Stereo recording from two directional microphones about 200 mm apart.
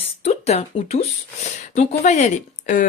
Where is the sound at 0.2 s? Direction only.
30° left (ahead or behind).